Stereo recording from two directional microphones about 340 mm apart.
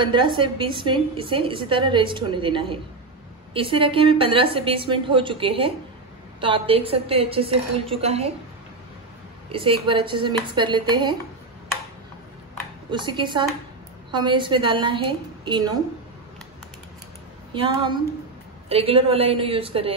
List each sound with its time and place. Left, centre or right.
0.0 s a woman's voice: centre
9.5 s a woman's voice: centre
12.9 s a woman's voice: centre
17.5 s a woman's voice: centre